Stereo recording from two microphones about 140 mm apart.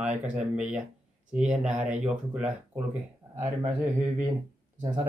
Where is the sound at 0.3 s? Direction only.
10° right (ahead or behind).